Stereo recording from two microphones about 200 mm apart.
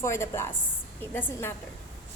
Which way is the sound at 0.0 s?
15° left (ahead or behind).